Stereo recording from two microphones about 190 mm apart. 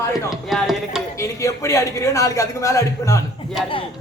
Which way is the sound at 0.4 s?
Centre (ahead or behind).